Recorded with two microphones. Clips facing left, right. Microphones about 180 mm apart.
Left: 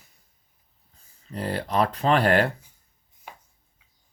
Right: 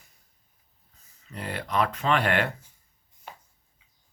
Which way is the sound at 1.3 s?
35° left (ahead or behind).